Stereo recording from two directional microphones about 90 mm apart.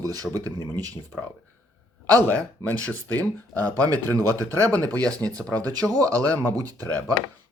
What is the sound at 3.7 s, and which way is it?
Speech, 40° right (ahead or behind).